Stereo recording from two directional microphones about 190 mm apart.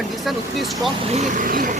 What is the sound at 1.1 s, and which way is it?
Speech, 40° right (ahead or behind).